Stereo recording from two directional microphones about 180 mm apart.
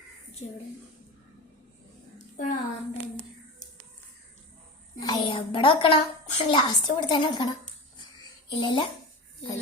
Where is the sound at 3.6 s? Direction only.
45° left (ahead or behind).